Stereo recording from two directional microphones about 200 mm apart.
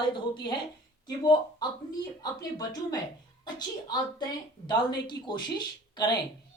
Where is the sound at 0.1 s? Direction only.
20° left (ahead or behind).